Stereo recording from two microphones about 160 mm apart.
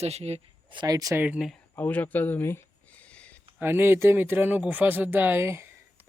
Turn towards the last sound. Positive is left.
turn(degrees=-15)  # may be behind; listen again after turning